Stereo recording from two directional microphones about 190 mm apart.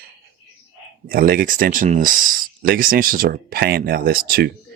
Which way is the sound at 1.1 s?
50° right (ahead or behind).